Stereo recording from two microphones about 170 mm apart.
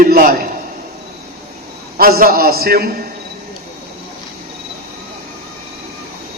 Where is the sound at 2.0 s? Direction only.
60° right (ahead or behind).